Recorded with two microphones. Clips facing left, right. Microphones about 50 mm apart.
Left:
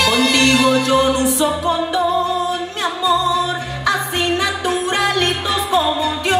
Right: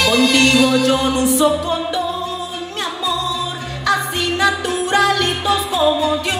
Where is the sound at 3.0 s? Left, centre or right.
Centre.